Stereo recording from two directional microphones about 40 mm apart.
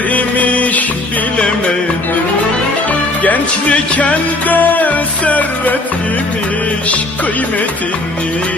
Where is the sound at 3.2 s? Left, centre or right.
Left.